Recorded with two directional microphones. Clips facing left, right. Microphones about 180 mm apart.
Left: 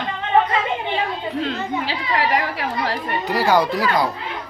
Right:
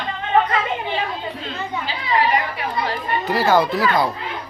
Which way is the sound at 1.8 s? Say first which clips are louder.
Right 5 dB; 80° left.